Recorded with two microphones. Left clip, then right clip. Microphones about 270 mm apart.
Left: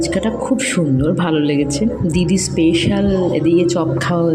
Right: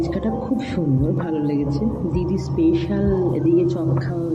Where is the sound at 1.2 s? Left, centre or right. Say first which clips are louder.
Left 6 dB; left.